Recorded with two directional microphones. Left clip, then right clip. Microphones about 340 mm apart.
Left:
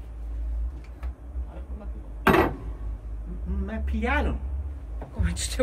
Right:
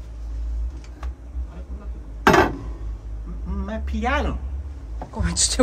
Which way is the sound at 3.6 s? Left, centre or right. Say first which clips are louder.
Right 4 dB; centre.